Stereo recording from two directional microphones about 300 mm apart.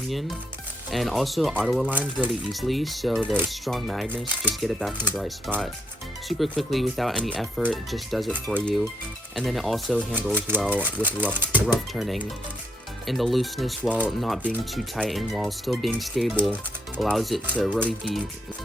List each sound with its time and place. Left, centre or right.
0.9 s speech: centre